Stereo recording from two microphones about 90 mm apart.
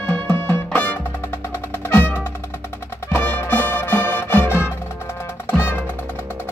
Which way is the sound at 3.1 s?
25° left (ahead or behind).